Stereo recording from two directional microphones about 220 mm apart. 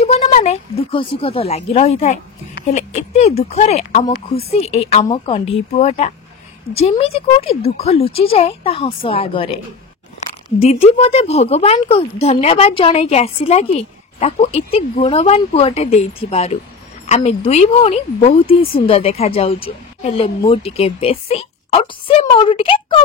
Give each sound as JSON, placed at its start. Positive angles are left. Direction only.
{"t": 0.0, "sound": "a woman's voice", "side_deg": 30}
{"t": 10.6, "sound": "a woman's voice", "side_deg": 30}